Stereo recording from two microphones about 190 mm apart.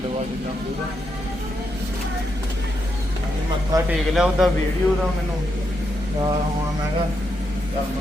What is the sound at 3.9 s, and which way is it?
Speech, 5° right (ahead or behind).